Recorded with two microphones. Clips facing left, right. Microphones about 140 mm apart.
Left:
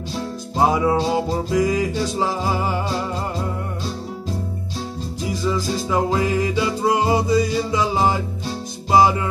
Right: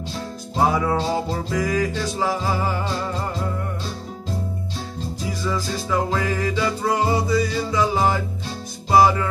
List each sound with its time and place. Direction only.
0.6 s music: 15° left (ahead or behind)
5.5 s music: 20° left (ahead or behind)